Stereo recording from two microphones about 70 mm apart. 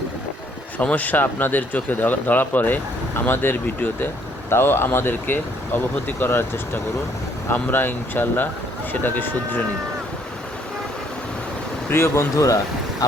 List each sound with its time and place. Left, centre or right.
0.8 s speech: left
11.9 s speech: left